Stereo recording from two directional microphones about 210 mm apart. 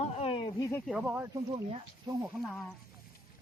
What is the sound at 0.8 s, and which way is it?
Speech, 5° right (ahead or behind).